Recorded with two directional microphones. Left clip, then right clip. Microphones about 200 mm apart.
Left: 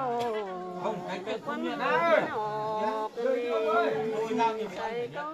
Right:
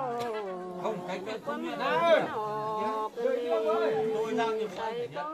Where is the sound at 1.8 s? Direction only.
15° left (ahead or behind).